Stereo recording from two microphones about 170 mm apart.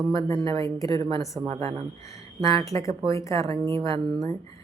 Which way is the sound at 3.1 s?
20° left (ahead or behind).